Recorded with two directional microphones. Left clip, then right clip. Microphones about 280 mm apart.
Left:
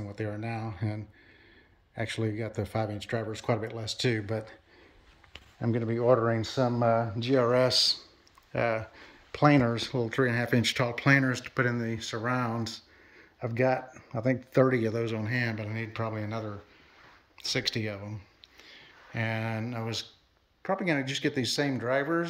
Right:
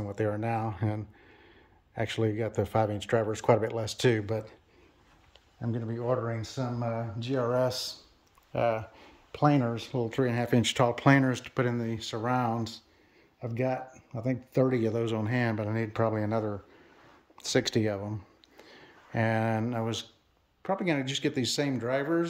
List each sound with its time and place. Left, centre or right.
0.0 s speech: centre
5.6 s speech: centre
13.9 s a sound: centre
14.5 s speech: centre